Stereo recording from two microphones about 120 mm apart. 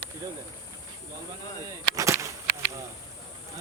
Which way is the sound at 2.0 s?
25° right (ahead or behind).